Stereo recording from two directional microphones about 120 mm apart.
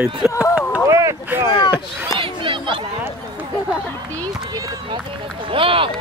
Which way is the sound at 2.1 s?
45° right (ahead or behind).